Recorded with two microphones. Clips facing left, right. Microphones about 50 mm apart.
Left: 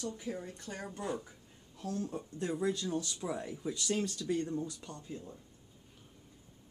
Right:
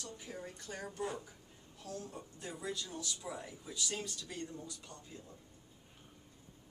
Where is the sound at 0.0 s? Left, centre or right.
Centre.